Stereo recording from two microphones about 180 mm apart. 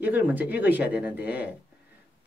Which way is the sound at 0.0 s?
10° right (ahead or behind).